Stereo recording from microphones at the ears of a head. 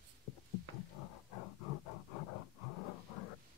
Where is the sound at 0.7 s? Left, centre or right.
Left.